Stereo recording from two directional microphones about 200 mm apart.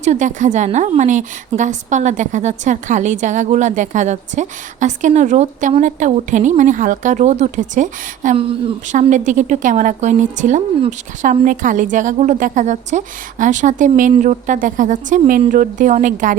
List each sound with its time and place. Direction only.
0.0 s a woman's voice: 35° right (ahead or behind)